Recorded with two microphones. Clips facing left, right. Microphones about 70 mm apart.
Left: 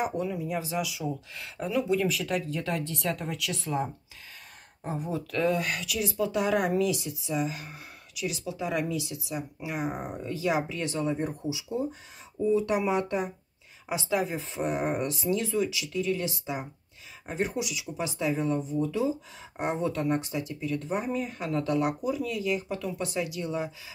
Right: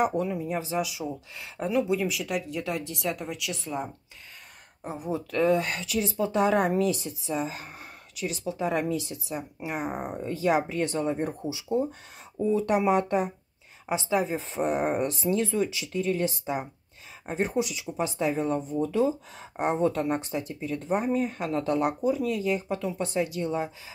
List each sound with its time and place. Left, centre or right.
0.0 s speech: right
2.0 s speech: centre
4.8 s speech: centre
5.1 s speech: right
13.8 s speech: right
14.3 s speech: right